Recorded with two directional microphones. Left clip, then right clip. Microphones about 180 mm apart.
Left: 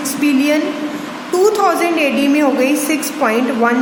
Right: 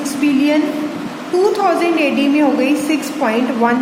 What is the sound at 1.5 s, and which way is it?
A woman's voice, 25° left (ahead or behind).